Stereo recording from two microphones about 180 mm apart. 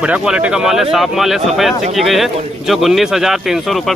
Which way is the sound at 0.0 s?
5° right (ahead or behind).